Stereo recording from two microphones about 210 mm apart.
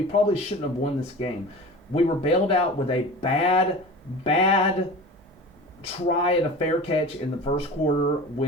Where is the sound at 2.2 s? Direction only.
30° left (ahead or behind).